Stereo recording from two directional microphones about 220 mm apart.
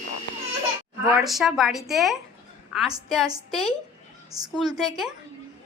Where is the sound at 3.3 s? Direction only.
Centre (ahead or behind).